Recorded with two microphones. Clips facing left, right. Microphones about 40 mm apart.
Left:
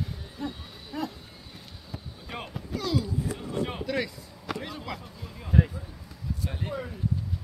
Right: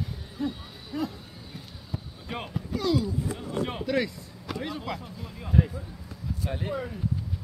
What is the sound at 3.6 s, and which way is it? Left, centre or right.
Chop, centre.